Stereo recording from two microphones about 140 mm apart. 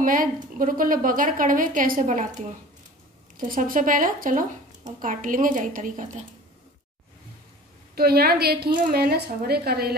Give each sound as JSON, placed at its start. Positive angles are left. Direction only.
{"t": 0.0, "sound": "a woman's voice", "side_deg": -80}
{"t": 3.3, "sound": "a woman's voice", "side_deg": -90}
{"t": 7.9, "sound": "a woman's voice", "side_deg": -90}